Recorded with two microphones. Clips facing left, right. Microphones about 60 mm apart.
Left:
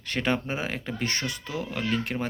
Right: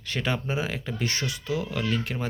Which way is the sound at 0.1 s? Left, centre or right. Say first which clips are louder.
Left 1 dB; left.